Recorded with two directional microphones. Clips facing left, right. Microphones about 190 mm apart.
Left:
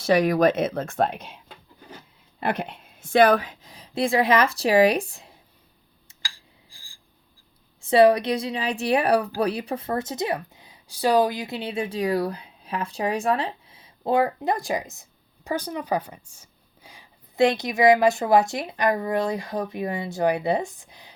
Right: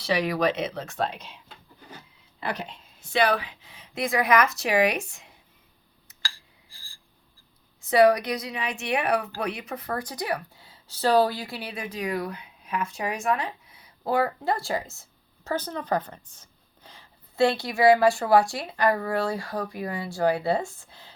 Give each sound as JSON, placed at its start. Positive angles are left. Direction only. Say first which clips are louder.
{"t": 0.0, "sound": "speech", "louder": "left 6 dB", "side_deg": 45}
{"t": 2.4, "sound": "a woman's voice", "louder": "left 5 dB", "side_deg": 55}
{"t": 6.2, "sound": "a sound", "louder": "right 2 dB", "side_deg": 15}
{"t": 7.8, "sound": "speech", "louder": "left 2 dB", "side_deg": 30}